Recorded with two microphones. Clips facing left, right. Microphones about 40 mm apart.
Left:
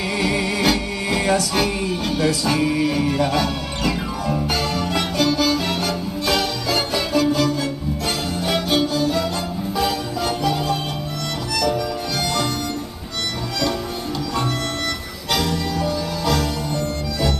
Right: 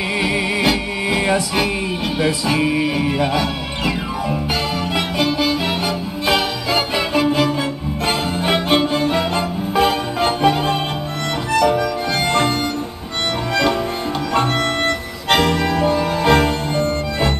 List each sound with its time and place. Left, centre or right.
0.2 s music: centre; by 12.4 s right
14.9 s music: right